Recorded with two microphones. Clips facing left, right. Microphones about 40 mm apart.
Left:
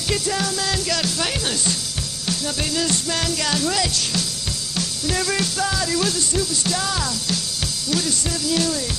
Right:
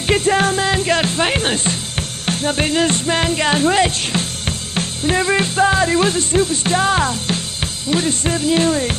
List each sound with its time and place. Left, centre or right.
0.0 s music: right
2.2 s speech: right